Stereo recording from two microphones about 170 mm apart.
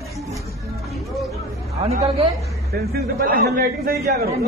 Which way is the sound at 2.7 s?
60° right (ahead or behind).